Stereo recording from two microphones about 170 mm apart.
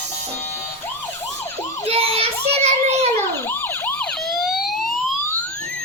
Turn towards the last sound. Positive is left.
turn(degrees=0)  # may be behind; listen again after turning